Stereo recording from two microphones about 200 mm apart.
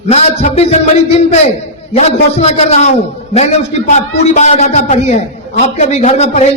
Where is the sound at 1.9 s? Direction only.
30° left (ahead or behind).